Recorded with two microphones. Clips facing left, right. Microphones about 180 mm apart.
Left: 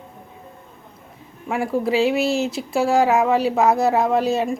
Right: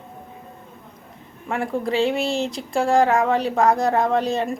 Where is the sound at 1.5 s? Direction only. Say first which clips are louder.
Left 3 dB; 5° left (ahead or behind).